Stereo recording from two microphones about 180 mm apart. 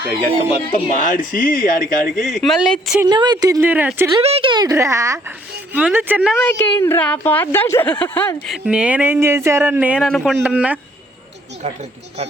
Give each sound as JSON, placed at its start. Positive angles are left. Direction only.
{"t": 0.7, "sound": "speech", "side_deg": 45}
{"t": 2.2, "sound": "speech", "side_deg": 0}
{"t": 3.1, "sound": "speech", "side_deg": -25}
{"t": 4.2, "sound": "speech", "side_deg": -30}
{"t": 6.3, "sound": "a woman's voice", "side_deg": 10}
{"t": 8.4, "sound": "speech", "side_deg": -5}
{"t": 10.1, "sound": "speech", "side_deg": 5}
{"t": 10.4, "sound": "speech", "side_deg": -5}